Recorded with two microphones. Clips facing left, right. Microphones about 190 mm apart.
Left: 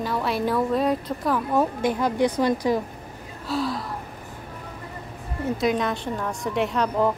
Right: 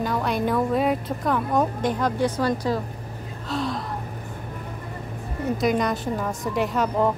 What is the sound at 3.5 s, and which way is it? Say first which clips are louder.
Gasp: left 1 dB; 5° left (ahead or behind).